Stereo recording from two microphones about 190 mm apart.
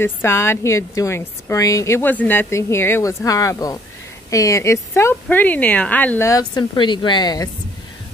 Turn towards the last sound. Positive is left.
turn(degrees=20)  # may be behind; listen again after turning